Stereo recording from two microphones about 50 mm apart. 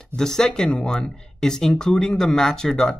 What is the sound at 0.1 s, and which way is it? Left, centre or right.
Speech, centre.